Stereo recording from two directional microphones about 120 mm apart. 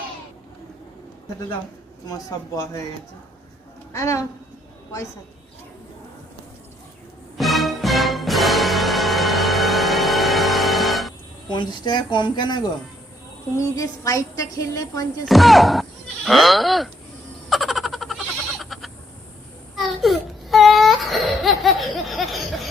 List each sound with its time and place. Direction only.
2.0 s a woman's voice: 30° left (ahead or behind)
3.9 s a woman's voice: 25° left (ahead or behind)
7.3 s music: centre (ahead or behind)
11.4 s speech: 40° left (ahead or behind)
13.6 s a woman's voice: 30° left (ahead or behind)
15.3 s speech: centre (ahead or behind)
17.5 s frog: centre (ahead or behind)
18.6 s bleat: centre (ahead or behind)
19.7 s baby cry: centre (ahead or behind)